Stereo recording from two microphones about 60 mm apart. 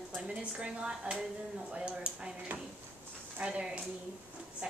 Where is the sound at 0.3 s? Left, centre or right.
Centre.